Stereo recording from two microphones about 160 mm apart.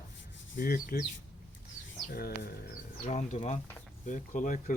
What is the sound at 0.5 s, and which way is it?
Speech, 60° left (ahead or behind).